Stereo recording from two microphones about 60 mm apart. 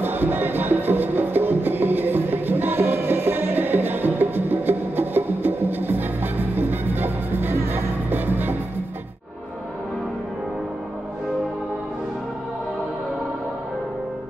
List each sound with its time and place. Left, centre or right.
0.0 s music: right